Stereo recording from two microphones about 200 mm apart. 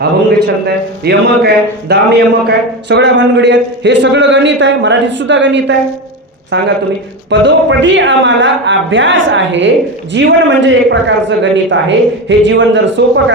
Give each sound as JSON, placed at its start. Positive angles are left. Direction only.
{"t": 0.0, "sound": "a woman's voice", "side_deg": -55}
{"t": 7.3, "sound": "a woman's voice", "side_deg": -65}